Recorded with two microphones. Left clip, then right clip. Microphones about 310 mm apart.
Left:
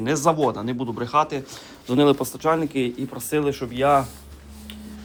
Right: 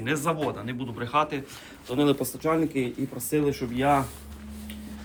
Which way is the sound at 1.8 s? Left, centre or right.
Left.